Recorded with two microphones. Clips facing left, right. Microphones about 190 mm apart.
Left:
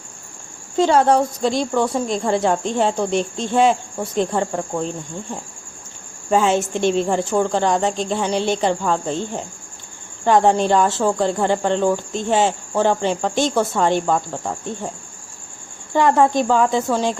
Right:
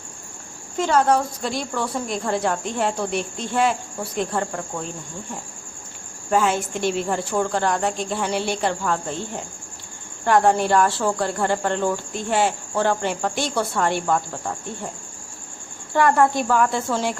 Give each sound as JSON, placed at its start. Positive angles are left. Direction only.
{"t": 0.8, "sound": "speech", "side_deg": 30}
{"t": 6.3, "sound": "speech", "side_deg": 25}
{"t": 10.2, "sound": "speech", "side_deg": 20}
{"t": 15.9, "sound": "speech", "side_deg": 20}